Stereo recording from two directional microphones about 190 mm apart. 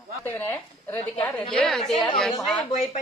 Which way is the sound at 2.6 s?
40° left (ahead or behind).